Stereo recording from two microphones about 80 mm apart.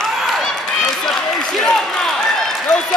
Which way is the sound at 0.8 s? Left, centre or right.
Centre.